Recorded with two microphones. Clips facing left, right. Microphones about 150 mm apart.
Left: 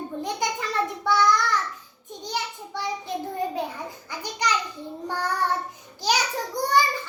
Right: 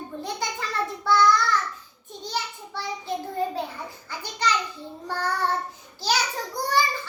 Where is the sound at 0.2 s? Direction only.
15° left (ahead or behind).